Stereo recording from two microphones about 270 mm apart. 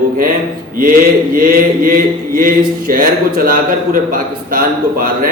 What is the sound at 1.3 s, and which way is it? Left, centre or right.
Mantra, right.